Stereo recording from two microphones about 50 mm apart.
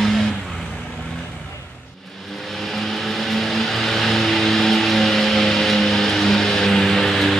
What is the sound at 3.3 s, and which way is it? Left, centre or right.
Vehicle, centre.